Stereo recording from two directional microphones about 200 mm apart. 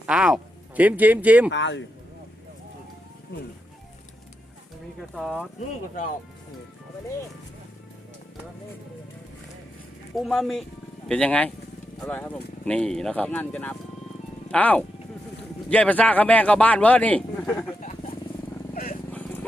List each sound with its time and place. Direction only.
0.0 s speech: 5° right (ahead or behind)
1.5 s speech: 65° left (ahead or behind)
5.1 s speech: 5° right (ahead or behind)
10.2 s a man's voice: centre (ahead or behind)
17.7 s vehicle: 40° left (ahead or behind)